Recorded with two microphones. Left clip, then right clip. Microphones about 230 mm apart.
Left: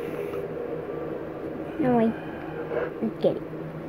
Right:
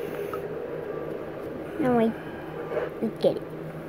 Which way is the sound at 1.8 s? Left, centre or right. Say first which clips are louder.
Even; centre.